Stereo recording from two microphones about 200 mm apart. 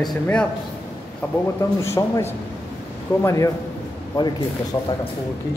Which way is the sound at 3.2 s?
15° left (ahead or behind).